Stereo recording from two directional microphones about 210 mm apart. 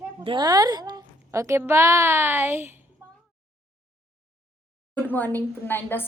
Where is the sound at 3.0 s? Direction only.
10° right (ahead or behind).